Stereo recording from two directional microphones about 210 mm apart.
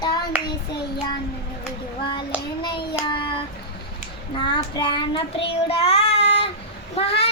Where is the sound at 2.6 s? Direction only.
20° left (ahead or behind).